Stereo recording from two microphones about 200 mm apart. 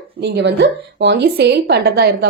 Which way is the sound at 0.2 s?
60° right (ahead or behind).